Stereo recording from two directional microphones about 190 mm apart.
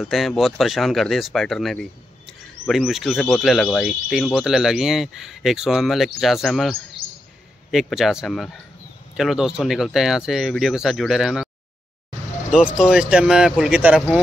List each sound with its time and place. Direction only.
0.0 s speech: centre (ahead or behind)
7.0 s a sound: 50° right (ahead or behind)
7.7 s speech: centre (ahead or behind)
12.7 s speech: 5° right (ahead or behind)